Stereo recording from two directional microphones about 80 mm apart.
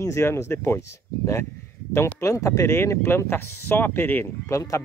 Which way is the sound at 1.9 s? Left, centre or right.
Left.